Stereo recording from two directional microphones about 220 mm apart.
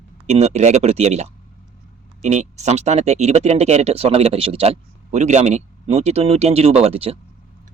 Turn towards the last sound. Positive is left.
turn(degrees=-25)  # may be behind; listen again after turning